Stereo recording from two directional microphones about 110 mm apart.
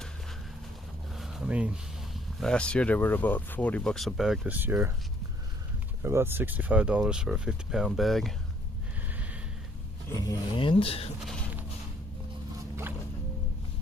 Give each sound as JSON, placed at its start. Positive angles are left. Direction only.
{"t": 1.1, "sound": "a sound", "side_deg": -5}
{"t": 2.4, "sound": "speech", "side_deg": 10}
{"t": 4.5, "sound": "speech", "side_deg": -15}
{"t": 6.0, "sound": "speech", "side_deg": -25}
{"t": 9.0, "sound": "snort", "side_deg": -15}
{"t": 10.5, "sound": "speech", "side_deg": 50}
{"t": 11.2, "sound": "a sound", "side_deg": 5}